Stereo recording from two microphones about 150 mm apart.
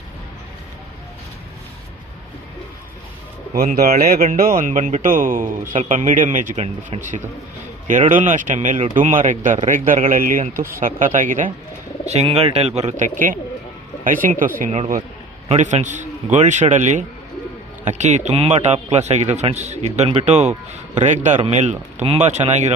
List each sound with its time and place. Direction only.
3.5 s speech: 85° right; by 6.6 s 60° right (ahead or behind)
6.9 s speech: 40° right (ahead or behind)
8.1 s speech: 60° right (ahead or behind)
12.0 s a man's voice: 45° right (ahead or behind)
13.1 s speech: 65° right (ahead or behind)
15.4 s a man's voice: 50° right (ahead or behind)